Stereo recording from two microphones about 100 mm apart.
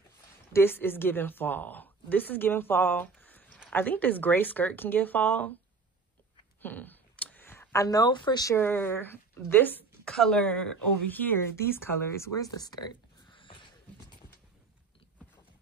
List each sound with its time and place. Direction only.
0.5 s a woman's voice: 25° left (ahead or behind)
6.6 s a sound: 20° left (ahead or behind)
7.8 s speech: 40° left (ahead or behind)
8.5 s a woman's voice: 20° left (ahead or behind)
10.0 s speech: 5° left (ahead or behind); by 12.3 s 25° left (ahead or behind)
12.4 s a sound: 40° left (ahead or behind)